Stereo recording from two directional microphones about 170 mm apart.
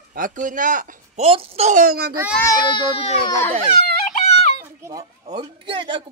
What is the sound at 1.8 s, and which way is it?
Speech, 65° right (ahead or behind).